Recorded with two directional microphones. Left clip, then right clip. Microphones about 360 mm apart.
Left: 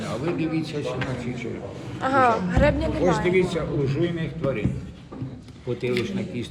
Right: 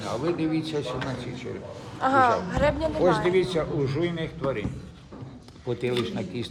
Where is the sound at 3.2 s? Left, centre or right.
Right.